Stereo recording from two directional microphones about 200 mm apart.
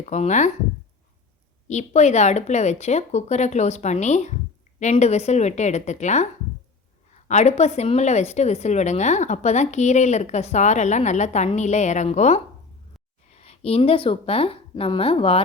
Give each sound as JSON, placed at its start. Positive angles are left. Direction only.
{"t": 0.0, "sound": "a woman's voice", "side_deg": 35}
{"t": 1.6, "sound": "a woman's voice", "side_deg": 35}
{"t": 7.3, "sound": "a woman's voice", "side_deg": 35}